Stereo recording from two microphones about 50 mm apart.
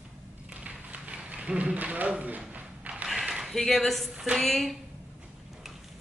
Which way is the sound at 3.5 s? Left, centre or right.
Centre.